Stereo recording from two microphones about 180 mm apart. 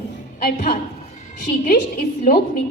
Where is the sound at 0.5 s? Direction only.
50° left (ahead or behind).